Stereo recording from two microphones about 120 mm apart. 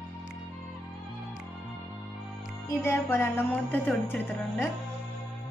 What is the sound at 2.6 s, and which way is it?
Music, 20° left (ahead or behind).